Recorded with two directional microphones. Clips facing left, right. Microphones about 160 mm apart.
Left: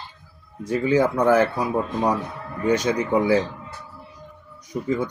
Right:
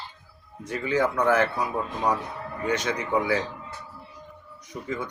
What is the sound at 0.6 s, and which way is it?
Speech, 35° left (ahead or behind).